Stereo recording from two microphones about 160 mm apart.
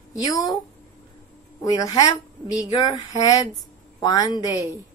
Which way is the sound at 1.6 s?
20° left (ahead or behind).